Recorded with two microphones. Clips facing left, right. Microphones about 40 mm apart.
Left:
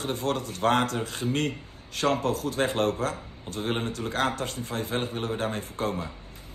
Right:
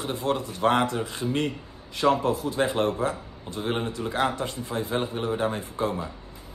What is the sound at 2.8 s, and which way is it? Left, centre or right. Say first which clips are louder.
Speech: right 1 dB; right.